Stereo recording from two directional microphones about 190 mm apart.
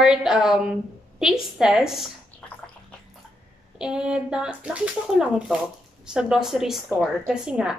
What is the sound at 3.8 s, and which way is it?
A woman's voice, 5° right (ahead or behind).